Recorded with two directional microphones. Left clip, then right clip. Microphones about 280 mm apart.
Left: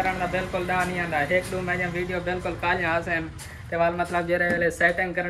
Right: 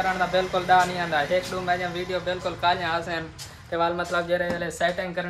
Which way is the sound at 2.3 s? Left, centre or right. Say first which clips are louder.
Right 3 dB; centre.